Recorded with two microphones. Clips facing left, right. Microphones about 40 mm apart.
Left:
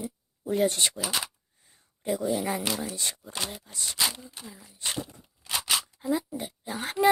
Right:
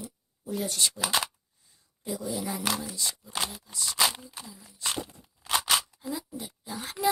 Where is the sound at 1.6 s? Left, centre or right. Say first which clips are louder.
Left 6 dB; left.